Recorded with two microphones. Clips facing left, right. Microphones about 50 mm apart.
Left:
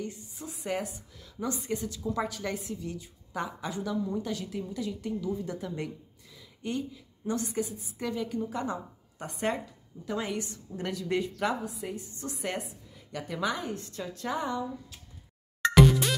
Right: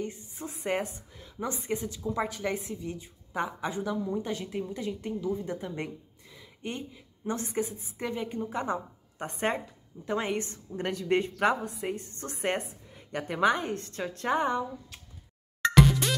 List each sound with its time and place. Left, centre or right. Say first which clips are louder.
0.0 s a woman's voice: right 2 dB; right
15.7 s music: left 2 dB; centre